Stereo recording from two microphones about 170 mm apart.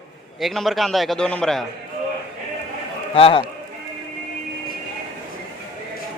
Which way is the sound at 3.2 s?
35° left (ahead or behind).